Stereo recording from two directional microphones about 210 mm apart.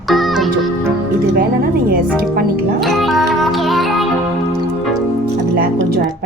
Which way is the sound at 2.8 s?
Centre (ahead or behind).